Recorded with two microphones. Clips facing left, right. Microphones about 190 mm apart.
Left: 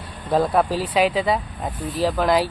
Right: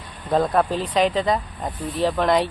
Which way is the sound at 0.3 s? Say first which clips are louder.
Left 1 dB; 5° left (ahead or behind).